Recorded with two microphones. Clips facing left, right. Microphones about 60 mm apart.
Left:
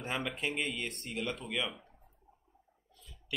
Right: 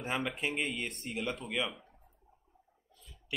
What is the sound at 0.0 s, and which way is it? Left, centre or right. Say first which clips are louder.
Speech: right 1 dB; centre.